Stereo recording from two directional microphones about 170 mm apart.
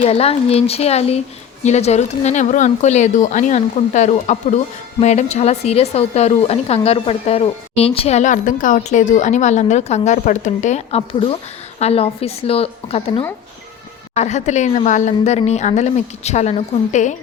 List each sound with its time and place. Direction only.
0.0 s speech: 35° left (ahead or behind)